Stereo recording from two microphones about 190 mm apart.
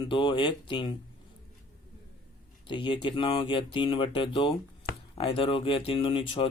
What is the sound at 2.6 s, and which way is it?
Speech, 25° left (ahead or behind).